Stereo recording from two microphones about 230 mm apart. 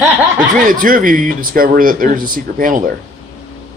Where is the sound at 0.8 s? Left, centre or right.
Right.